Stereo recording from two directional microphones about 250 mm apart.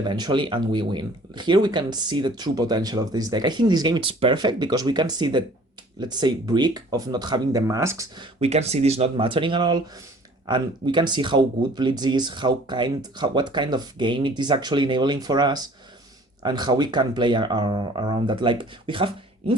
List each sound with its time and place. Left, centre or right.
0.0 s speech: centre
8.4 s speech: right